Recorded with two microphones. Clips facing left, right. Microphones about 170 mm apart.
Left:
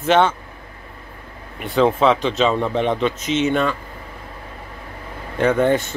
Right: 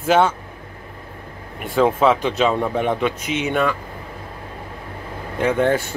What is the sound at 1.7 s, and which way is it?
Speech, 5° right (ahead or behind).